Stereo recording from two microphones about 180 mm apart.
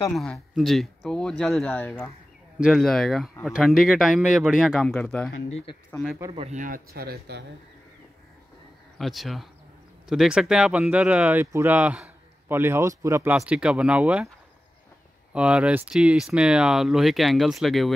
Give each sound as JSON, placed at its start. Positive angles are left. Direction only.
{"t": 0.1, "sound": "speech", "side_deg": 0}
{"t": 6.3, "sound": "speech", "side_deg": -40}
{"t": 8.9, "sound": "speech", "side_deg": 0}
{"t": 15.3, "sound": "speech", "side_deg": -5}